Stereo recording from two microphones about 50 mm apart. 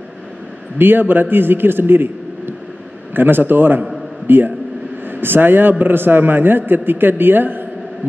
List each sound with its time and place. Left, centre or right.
0.7 s a man's voice: right